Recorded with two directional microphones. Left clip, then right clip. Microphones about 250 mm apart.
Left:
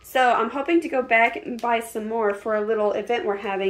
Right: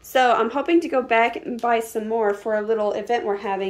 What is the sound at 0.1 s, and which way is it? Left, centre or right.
A woman's voice, centre.